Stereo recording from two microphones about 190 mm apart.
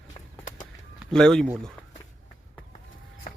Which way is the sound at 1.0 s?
5° left (ahead or behind).